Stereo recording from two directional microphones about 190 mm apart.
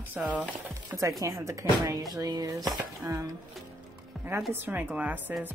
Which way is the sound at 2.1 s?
20° right (ahead or behind).